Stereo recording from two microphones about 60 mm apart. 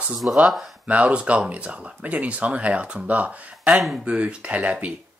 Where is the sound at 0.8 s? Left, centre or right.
Right.